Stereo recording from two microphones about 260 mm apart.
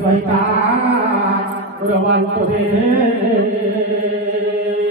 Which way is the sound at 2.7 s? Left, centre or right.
Centre.